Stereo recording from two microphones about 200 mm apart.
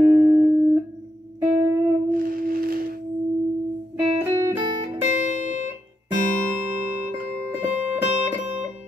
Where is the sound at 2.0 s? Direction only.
45° right (ahead or behind).